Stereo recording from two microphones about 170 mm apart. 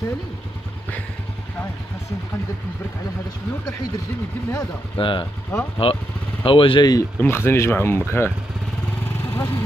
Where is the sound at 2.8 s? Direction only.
20° left (ahead or behind).